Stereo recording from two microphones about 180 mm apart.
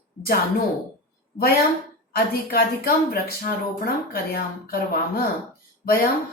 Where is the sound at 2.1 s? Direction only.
55° left (ahead or behind).